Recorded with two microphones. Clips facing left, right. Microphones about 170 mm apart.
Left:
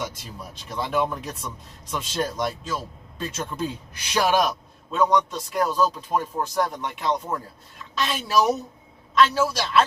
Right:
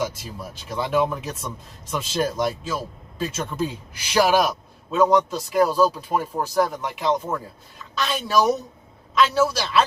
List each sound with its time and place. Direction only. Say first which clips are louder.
0.0 s a man's voice: right 5 dB; centre (ahead or behind)